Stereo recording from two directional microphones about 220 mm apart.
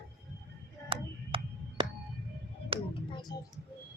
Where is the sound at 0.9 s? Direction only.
25° right (ahead or behind).